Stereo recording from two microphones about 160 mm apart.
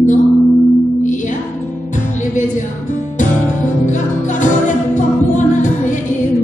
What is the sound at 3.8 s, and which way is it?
Music, 50° left (ahead or behind).